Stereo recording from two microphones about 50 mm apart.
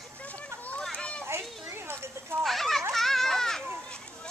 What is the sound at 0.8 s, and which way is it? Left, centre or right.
Children playing, centre.